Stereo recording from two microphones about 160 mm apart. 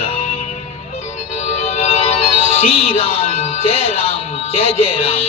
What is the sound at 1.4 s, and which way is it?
Music, 45° left (ahead or behind).